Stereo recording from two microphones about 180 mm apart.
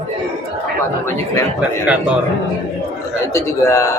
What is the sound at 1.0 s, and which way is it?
Speech, 15° left (ahead or behind).